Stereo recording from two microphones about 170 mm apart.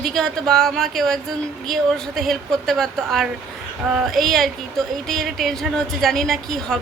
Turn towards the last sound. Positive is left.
turn(degrees=0)  # may be behind; listen again after turning